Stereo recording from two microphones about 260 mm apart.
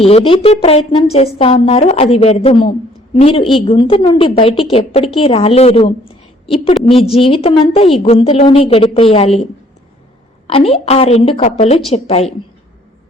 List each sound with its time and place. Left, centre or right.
0.0 s a woman's voice: left
10.4 s a woman's voice: left